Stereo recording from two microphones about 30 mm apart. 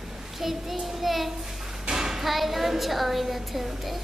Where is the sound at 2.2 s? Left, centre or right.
Centre.